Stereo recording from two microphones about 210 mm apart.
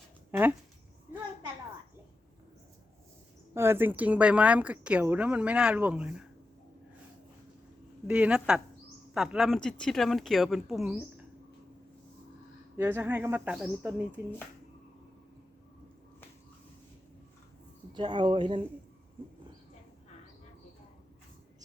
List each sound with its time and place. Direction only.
0.3 s speech: 10° right (ahead or behind)
3.5 s a woman's voice: 10° right (ahead or behind)
8.0 s speech: 5° right (ahead or behind)
12.7 s a woman's voice: 10° right (ahead or behind)
17.9 s speech: 20° right (ahead or behind)